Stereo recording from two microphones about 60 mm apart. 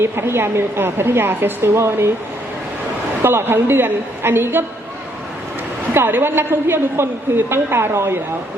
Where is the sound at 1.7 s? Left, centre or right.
Right.